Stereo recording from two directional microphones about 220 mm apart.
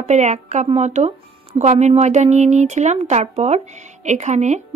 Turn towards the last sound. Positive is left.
turn(degrees=-30)  # may be behind; listen again after turning